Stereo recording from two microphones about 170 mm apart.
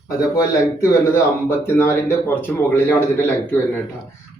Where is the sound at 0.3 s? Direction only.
15° left (ahead or behind).